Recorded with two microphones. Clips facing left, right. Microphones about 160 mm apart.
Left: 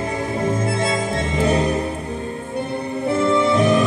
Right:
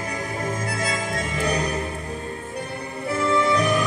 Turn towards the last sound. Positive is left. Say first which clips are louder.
# left 4 dB
turn(degrees=25)  # may be behind; listen again after turning